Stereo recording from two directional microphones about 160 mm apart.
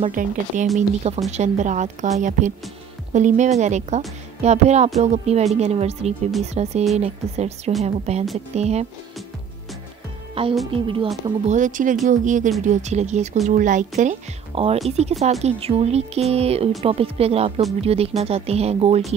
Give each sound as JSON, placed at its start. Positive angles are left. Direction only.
{"t": 0.0, "sound": "speech", "side_deg": -55}
{"t": 0.7, "sound": "speech", "side_deg": -40}
{"t": 10.4, "sound": "speech", "side_deg": -35}
{"t": 11.4, "sound": "speech", "side_deg": -50}